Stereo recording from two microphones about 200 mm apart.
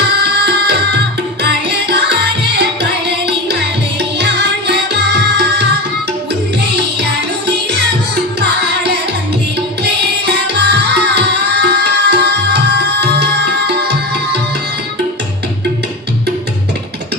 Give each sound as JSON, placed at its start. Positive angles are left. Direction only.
{"t": 0.2, "sound": "music", "side_deg": -55}
{"t": 1.4, "sound": "tabla", "side_deg": -55}
{"t": 2.6, "sound": "music", "side_deg": -60}
{"t": 7.0, "sound": "music", "side_deg": -60}